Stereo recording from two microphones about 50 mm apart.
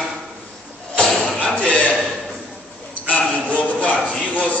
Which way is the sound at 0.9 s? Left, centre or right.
Centre.